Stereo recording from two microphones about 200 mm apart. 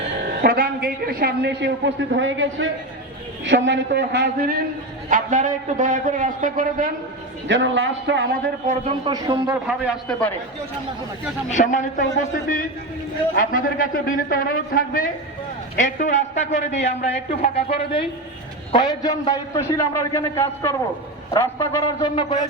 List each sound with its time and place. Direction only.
0.4 s a man's voice: 50° right (ahead or behind)
5.0 s a man's voice: 40° right (ahead or behind)
7.4 s a man's voice: 70° right (ahead or behind)
8.6 s a man's voice: 25° right (ahead or behind)
9.6 s a man's voice: centre (ahead or behind)
11.5 s speech: 40° left (ahead or behind)
13.3 s a man's voice: 45° left (ahead or behind); by 22.4 s 20° left (ahead or behind)